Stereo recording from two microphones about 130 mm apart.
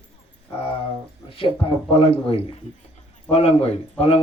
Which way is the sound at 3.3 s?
50° left (ahead or behind).